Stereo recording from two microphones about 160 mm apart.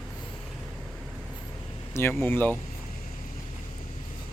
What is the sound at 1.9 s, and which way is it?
Speech, 15° left (ahead or behind).